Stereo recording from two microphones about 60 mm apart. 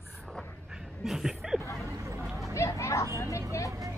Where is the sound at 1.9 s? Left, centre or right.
Right.